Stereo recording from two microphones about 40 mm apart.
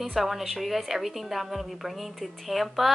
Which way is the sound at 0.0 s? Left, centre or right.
Centre.